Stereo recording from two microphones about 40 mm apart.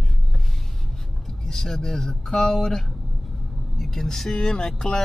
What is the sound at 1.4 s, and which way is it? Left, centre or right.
Speech, centre.